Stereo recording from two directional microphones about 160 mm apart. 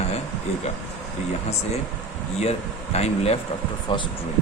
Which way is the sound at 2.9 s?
40° left (ahead or behind).